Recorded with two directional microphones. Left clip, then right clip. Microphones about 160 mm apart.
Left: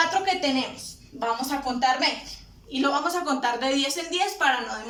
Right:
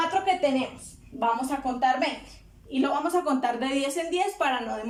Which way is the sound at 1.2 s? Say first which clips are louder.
Right 1 dB; 25° right (ahead or behind).